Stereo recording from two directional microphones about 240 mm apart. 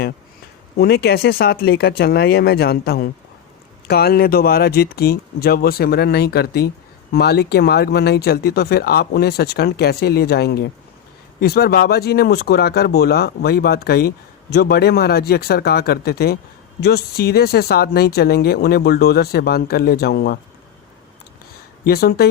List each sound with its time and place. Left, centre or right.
0.8 s speech: left
21.8 s speech: left